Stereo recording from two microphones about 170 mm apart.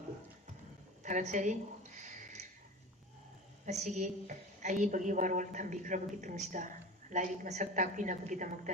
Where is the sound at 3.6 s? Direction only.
45° right (ahead or behind).